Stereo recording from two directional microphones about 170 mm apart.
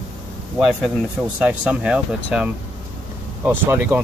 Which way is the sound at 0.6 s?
5° right (ahead or behind).